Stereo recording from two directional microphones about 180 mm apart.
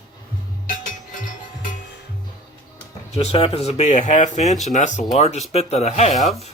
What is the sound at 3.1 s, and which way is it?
Speech, 35° left (ahead or behind).